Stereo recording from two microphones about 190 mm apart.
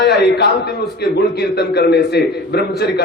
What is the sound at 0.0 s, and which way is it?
A man's voice, 60° left (ahead or behind).